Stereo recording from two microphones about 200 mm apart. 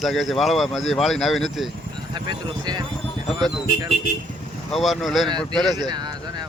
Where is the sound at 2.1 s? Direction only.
20° right (ahead or behind).